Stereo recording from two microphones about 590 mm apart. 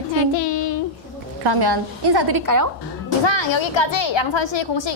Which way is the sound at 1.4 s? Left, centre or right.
Right.